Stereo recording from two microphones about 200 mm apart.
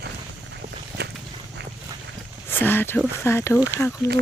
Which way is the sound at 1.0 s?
55° right (ahead or behind).